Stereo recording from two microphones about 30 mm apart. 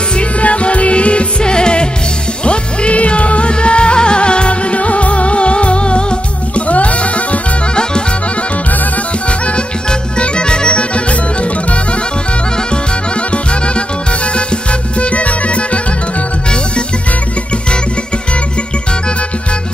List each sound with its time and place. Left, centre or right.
0.2 s music: left
1.4 s music: left
6.7 s music: left
9.8 s music: left
13.3 s music: left